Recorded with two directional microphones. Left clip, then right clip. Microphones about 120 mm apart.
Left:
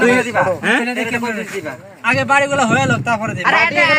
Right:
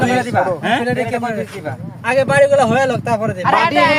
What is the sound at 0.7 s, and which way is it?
Speech, 70° right (ahead or behind).